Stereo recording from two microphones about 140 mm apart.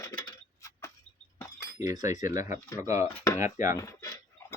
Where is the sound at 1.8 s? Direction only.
25° right (ahead or behind).